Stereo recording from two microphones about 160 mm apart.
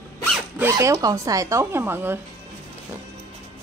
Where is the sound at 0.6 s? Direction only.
20° right (ahead or behind).